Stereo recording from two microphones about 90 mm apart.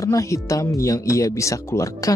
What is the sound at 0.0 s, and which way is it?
Speech, 35° left (ahead or behind).